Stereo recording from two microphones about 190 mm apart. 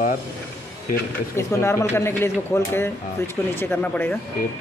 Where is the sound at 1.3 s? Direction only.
15° left (ahead or behind).